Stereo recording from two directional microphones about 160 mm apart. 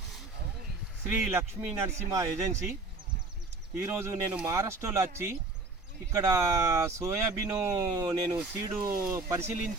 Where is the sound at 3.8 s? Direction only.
15° right (ahead or behind).